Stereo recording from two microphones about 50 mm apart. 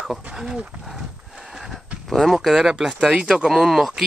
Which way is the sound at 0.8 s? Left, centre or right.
Centre.